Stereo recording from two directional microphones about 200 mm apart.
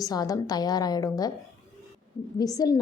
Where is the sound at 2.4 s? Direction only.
20° left (ahead or behind).